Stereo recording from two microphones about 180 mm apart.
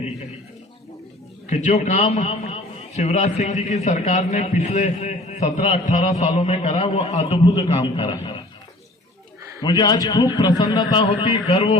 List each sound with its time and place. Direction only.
1.5 s a man's voice: 40° left (ahead or behind)
9.6 s a man's voice: 20° left (ahead or behind)